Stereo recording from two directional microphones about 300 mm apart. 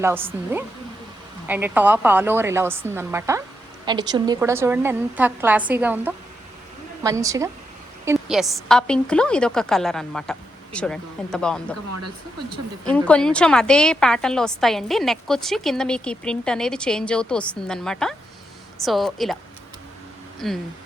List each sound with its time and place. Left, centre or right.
0.0 s a woman's voice: centre
1.5 s a woman's voice: centre
11.9 s speech: right
12.8 s a woman's voice: centre
20.4 s a woman's voice: centre